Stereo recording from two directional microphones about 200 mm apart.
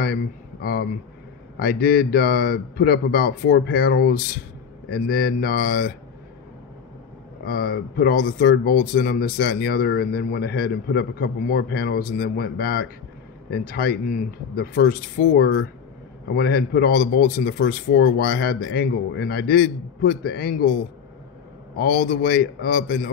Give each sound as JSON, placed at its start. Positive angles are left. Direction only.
{"t": 0.0, "sound": "a man's voice", "side_deg": 50}
{"t": 7.4, "sound": "speech", "side_deg": 50}
{"t": 21.7, "sound": "speech", "side_deg": 50}